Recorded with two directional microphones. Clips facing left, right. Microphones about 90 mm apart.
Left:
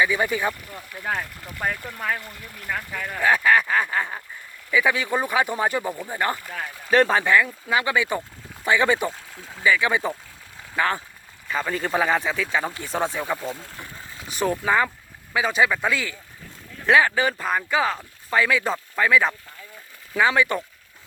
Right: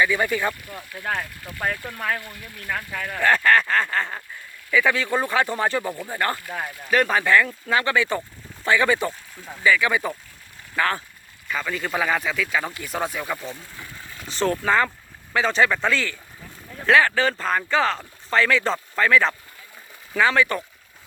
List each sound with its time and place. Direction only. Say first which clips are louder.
0.0 s speech: even; 15° left (ahead or behind)
0.7 s speech: even; centre (ahead or behind)
5.9 s speech: even; 5° left (ahead or behind)
6.1 s speech: even; 15° left (ahead or behind)
6.9 s speech: left 2 dB; 30° left (ahead or behind)
7.3 s speech: right 1 dB; 15° left (ahead or behind)
11.4 s speech: left 2 dB; 30° left (ahead or behind)
13.7 s speech: even; 15° left (ahead or behind)